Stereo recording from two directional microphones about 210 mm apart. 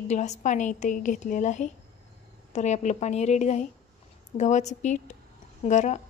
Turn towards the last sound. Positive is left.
turn(degrees=35)  # may be behind; listen again after turning